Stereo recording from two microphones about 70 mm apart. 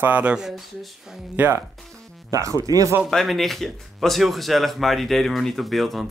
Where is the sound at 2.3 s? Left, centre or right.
Right.